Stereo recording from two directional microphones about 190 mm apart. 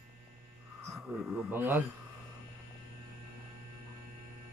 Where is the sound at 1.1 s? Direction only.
10° right (ahead or behind).